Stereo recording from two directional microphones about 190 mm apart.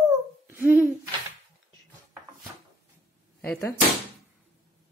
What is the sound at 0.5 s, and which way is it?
Hoot, 10° right (ahead or behind).